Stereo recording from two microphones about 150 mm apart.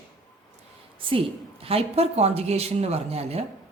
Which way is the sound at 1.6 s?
40° right (ahead or behind).